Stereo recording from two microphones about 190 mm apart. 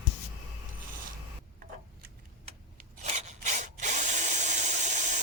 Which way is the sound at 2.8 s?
40° right (ahead or behind).